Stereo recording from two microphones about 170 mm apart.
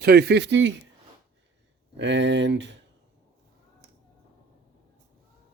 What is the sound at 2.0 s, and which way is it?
Speech, 90° right.